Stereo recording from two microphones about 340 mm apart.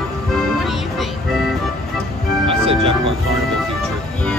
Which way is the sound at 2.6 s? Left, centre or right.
Centre.